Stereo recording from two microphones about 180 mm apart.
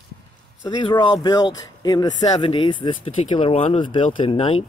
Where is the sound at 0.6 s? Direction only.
25° left (ahead or behind).